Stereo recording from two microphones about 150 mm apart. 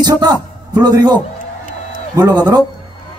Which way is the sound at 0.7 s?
25° right (ahead or behind).